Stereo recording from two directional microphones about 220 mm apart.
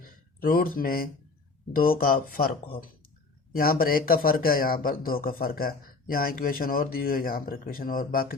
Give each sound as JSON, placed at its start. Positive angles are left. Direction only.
{"t": 0.0, "sound": "speech", "side_deg": 40}